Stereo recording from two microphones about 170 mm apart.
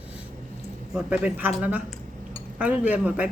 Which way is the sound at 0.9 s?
10° right (ahead or behind).